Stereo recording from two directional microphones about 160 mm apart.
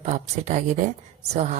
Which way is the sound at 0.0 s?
50° right (ahead or behind).